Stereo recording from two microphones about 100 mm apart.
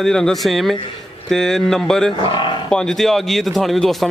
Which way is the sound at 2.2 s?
55° left (ahead or behind).